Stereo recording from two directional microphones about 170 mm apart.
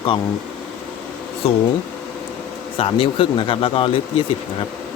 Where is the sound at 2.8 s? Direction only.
30° left (ahead or behind).